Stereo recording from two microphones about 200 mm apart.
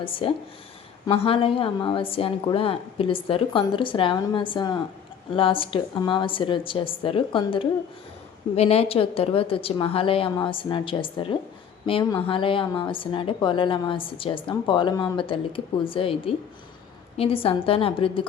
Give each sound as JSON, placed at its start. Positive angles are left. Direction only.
{"t": 0.0, "sound": "a woman's voice", "side_deg": 25}